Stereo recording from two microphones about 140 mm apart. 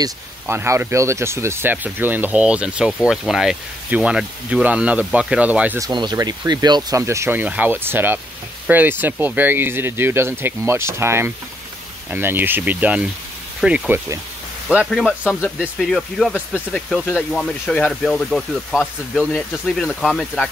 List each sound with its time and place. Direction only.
0.0 s speech: 20° right (ahead or behind)
5.8 s speech: 30° right (ahead or behind); by 14.2 s 15° right (ahead or behind)
14.9 s speech: centre (ahead or behind)